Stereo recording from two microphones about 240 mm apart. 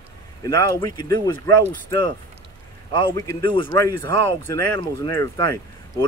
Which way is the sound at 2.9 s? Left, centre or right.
Centre.